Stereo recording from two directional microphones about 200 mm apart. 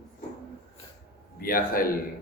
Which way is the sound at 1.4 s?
45° left (ahead or behind).